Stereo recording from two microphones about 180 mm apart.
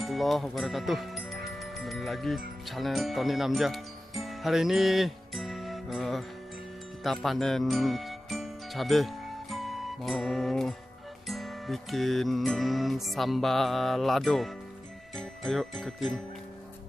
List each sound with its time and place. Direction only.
0.0 s speech: centre (ahead or behind)
7.0 s music: centre (ahead or behind)
15.1 s jingle bell: centre (ahead or behind)